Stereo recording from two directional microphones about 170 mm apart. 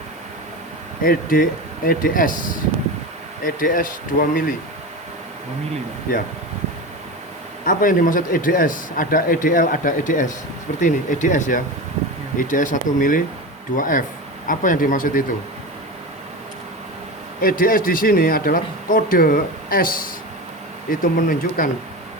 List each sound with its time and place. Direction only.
1.0 s a man's voice: 55° left (ahead or behind)
7.6 s a man's voice: 55° left (ahead or behind)
17.4 s a man's voice: 55° left (ahead or behind)